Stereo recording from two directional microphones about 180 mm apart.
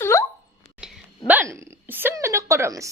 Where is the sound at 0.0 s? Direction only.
15° left (ahead or behind).